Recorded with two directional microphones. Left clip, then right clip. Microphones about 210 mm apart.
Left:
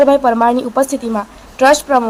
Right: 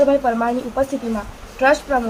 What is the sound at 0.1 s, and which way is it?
A woman's voice, 20° left (ahead or behind).